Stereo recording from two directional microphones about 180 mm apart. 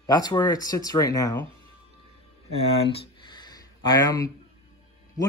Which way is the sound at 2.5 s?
35° left (ahead or behind).